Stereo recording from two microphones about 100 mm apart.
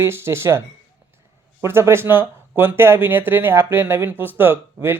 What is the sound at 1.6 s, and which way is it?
Speech, 25° right (ahead or behind).